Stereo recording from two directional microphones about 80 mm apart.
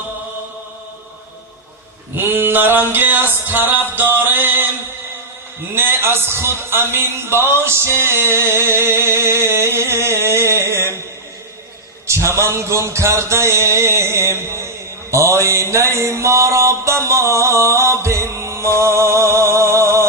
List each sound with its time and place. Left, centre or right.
2.1 s music: right
5.7 s a man's voice: right
12.0 s a man's voice: right
15.1 s mantra: right